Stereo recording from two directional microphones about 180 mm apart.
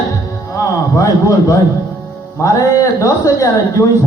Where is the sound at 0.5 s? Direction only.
15° left (ahead or behind).